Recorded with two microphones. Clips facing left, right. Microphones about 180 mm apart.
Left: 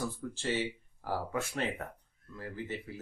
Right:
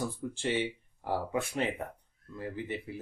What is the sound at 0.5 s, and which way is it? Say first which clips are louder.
Speech: right 2 dB; 20° right (ahead or behind).